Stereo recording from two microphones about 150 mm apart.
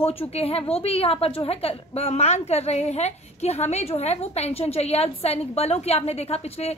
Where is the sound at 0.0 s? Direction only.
40° left (ahead or behind).